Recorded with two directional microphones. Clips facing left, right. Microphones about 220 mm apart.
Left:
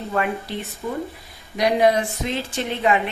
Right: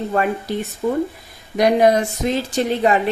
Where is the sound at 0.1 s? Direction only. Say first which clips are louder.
Right 2 dB; 40° right (ahead or behind).